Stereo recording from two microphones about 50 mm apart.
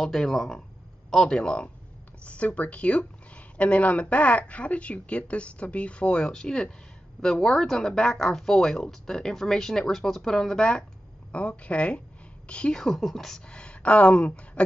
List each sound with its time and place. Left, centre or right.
0.0 s speech: centre
12.8 s speech: centre; by 14.6 s left